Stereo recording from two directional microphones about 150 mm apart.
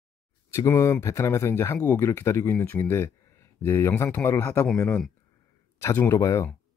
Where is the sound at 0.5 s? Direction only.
20° left (ahead or behind).